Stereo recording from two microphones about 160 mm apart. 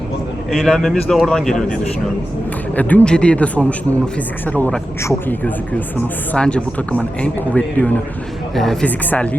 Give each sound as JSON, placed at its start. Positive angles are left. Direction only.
{"t": 0.5, "sound": "speech", "side_deg": 0}
{"t": 2.7, "sound": "speech", "side_deg": 10}